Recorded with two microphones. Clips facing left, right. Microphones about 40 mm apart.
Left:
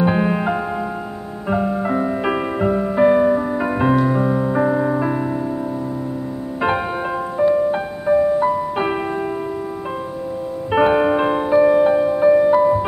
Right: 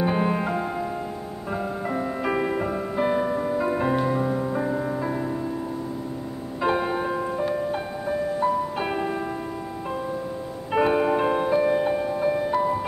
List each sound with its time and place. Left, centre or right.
0.0 s music: left
3.9 s music: centre
4.2 s music: left
6.8 s music: left
10.7 s music: left